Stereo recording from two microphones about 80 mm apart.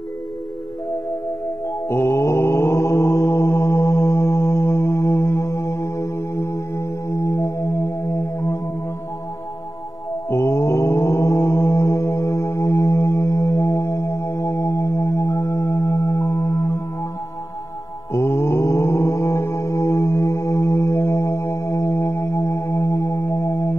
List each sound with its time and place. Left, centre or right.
1.9 s mantra: left
10.3 s mantra: left
18.1 s mantra: left